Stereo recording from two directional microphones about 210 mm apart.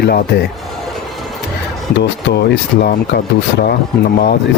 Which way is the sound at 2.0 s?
55° left (ahead or behind).